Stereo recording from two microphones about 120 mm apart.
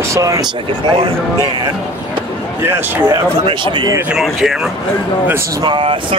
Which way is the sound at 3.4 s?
40° right (ahead or behind).